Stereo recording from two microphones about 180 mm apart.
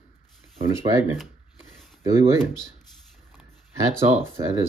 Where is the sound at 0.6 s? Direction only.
15° right (ahead or behind).